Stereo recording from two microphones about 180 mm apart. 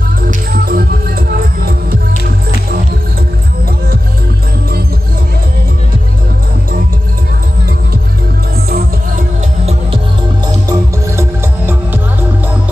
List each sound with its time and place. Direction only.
0.2 s music: 55° right (ahead or behind)
10.7 s music: 15° right (ahead or behind)